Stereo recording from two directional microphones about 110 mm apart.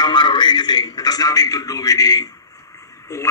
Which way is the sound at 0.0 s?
45° left (ahead or behind).